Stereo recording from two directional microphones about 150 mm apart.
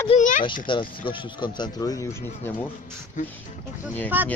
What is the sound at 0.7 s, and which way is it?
Speech, 35° left (ahead or behind).